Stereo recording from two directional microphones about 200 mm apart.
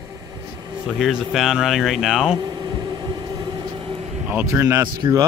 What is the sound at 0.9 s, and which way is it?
Speech, 5° right (ahead or behind).